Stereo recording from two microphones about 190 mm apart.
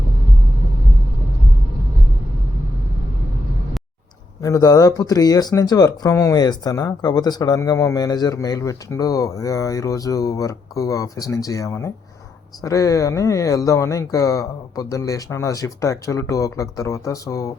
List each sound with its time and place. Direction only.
4.4 s speech: 20° left (ahead or behind)